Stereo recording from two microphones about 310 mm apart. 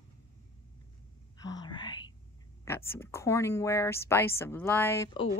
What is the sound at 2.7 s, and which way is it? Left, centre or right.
Speech, centre.